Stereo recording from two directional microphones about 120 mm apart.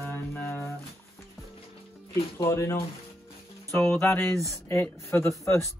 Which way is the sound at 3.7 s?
25° left (ahead or behind).